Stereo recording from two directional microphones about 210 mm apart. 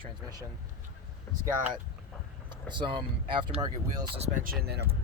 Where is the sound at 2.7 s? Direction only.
20° right (ahead or behind).